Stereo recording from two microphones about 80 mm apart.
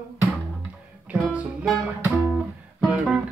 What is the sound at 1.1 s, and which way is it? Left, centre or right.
Music, centre.